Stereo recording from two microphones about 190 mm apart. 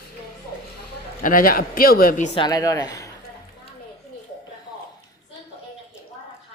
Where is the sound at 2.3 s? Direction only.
20° left (ahead or behind).